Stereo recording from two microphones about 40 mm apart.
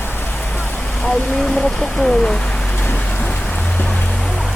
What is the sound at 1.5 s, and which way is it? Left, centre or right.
Speech, centre.